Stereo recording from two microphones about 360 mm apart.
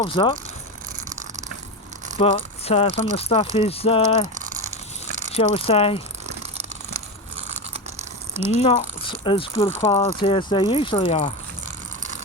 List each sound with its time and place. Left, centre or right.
0.0 s speech: centre
2.1 s speech: centre
5.3 s speech: centre
6.2 s a sound: centre
8.5 s speech: centre